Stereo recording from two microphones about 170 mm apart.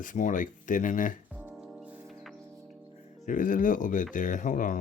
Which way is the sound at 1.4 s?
5° right (ahead or behind).